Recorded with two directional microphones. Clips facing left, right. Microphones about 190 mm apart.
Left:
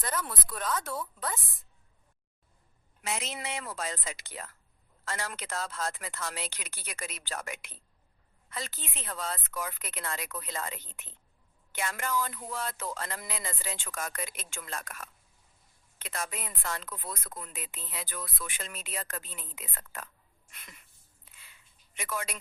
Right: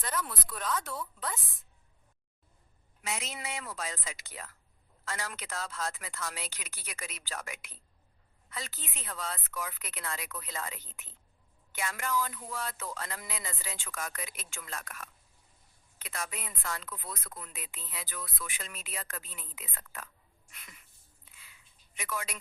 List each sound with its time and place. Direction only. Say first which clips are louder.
0.0 s speech: left 1 dB; 45° left (ahead or behind)
3.3 s speech: left 2 dB; 45° left (ahead or behind)
11.8 s speech: left 1 dB; 45° left (ahead or behind)
16.1 s speech: left 2 dB; 45° left (ahead or behind)
21.9 s speech: left 2 dB; 45° left (ahead or behind)